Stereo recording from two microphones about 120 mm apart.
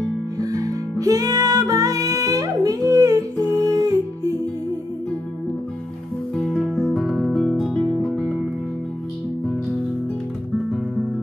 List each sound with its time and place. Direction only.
0.4 s music: 30° right (ahead or behind)
6.3 s music: 5° left (ahead or behind)